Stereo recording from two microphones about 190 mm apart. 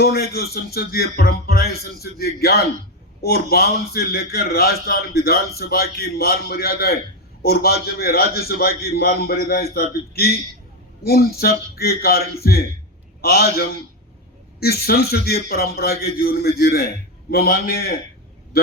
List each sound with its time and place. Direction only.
0.0 s a man's voice: 55° left (ahead or behind)